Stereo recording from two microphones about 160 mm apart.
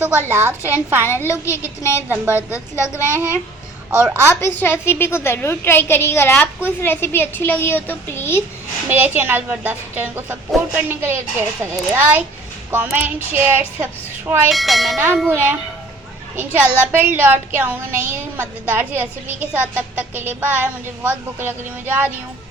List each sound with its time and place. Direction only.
0.0 s a woman's voice: 10° right (ahead or behind)
1.0 s a woman's voice: 15° left (ahead or behind)
4.4 s a woman's voice: 15° left (ahead or behind)
8.9 s a woman's voice: 10° right (ahead or behind)
14.5 s speech: centre (ahead or behind)
15.3 s a woman's voice: 10° right (ahead or behind)